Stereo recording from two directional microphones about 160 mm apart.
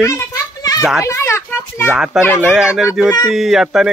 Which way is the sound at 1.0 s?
15° left (ahead or behind).